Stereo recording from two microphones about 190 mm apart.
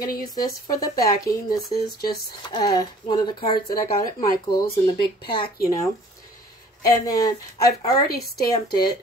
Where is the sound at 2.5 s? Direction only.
20° left (ahead or behind).